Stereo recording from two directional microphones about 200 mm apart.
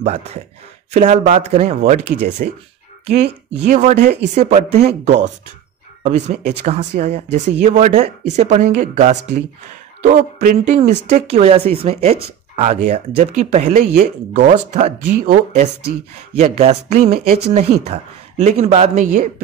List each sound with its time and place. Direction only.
0.0 s speech: 30° right (ahead or behind)
4.0 s speech: 55° right (ahead or behind)
4.4 s speech: 30° right (ahead or behind)
18.4 s speech: 35° right (ahead or behind)